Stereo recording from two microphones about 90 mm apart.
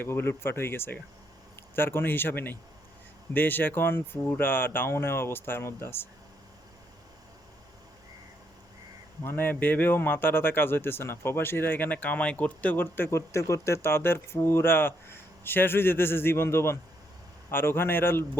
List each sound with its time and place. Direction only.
0.0 s speech: 25° left (ahead or behind)
9.2 s speech: 25° left (ahead or behind)